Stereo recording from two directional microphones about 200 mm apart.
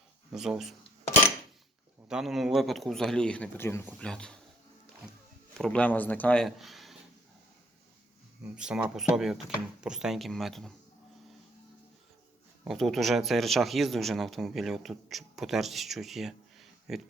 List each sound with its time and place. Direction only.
0.3 s speech: centre (ahead or behind)
2.0 s speech: centre (ahead or behind)
5.5 s speech: 5° left (ahead or behind)
8.5 s speech: 5° right (ahead or behind)
12.6 s speech: centre (ahead or behind)